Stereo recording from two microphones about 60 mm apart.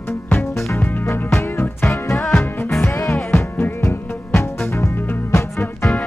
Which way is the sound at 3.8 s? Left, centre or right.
Left.